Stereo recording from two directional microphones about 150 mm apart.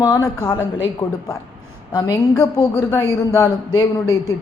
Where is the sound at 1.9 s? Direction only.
25° left (ahead or behind).